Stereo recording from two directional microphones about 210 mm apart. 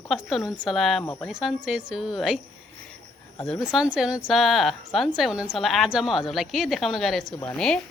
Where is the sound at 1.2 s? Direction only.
Centre (ahead or behind).